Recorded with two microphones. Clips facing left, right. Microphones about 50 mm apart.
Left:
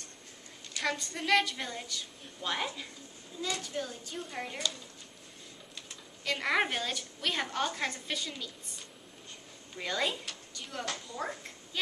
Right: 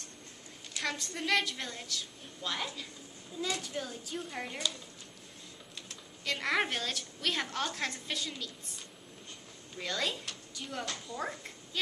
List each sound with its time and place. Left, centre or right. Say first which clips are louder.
0.7 s a woman's voice: left 2 dB; centre
2.5 s speech: left 3 dB; centre
3.3 s a woman's voice: even; centre
5.9 s a woman's voice: left 2 dB; centre
10.5 s a woman's voice: left 1 dB; centre